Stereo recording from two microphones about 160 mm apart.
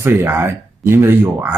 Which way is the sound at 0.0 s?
15° right (ahead or behind).